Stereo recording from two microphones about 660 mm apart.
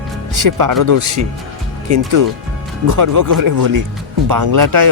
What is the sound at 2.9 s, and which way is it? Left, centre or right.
Speech, right.